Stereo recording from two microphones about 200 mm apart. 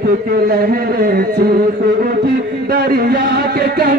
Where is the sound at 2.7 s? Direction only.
50° right (ahead or behind).